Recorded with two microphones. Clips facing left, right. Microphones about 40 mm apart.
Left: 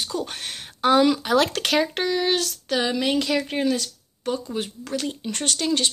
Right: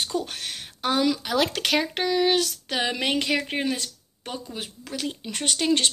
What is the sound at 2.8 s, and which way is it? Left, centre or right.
Speech, right.